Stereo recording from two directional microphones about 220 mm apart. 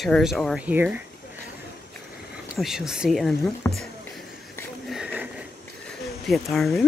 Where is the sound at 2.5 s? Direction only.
Centre (ahead or behind).